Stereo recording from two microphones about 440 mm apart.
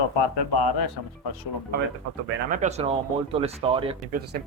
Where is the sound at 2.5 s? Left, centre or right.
Centre.